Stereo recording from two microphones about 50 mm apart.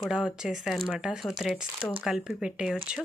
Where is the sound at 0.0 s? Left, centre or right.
Centre.